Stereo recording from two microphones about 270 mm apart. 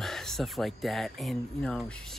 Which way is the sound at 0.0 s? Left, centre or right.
Centre.